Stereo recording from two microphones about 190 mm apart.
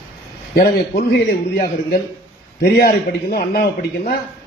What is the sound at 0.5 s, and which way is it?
Speech, 55° left (ahead or behind).